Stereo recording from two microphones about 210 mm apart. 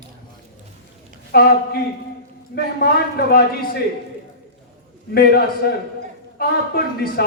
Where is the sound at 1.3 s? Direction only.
45° left (ahead or behind).